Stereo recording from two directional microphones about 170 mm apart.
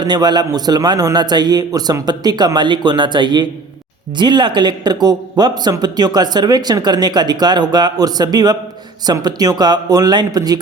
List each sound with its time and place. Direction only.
0.0 s speech: 25° right (ahead or behind)